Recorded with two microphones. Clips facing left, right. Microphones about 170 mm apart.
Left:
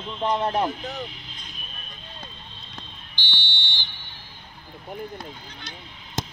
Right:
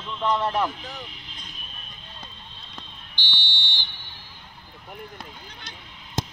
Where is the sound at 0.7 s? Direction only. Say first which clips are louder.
Left 6 dB; 45° left (ahead or behind).